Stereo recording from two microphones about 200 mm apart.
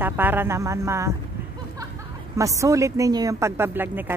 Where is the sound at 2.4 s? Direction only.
15° right (ahead or behind).